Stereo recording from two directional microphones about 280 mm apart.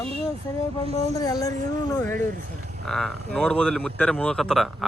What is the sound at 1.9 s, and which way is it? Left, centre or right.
Speech, centre.